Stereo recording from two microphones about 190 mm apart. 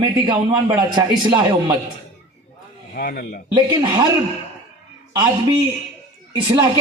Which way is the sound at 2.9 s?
50° left (ahead or behind).